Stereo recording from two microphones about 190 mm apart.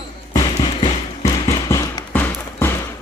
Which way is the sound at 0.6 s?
25° left (ahead or behind).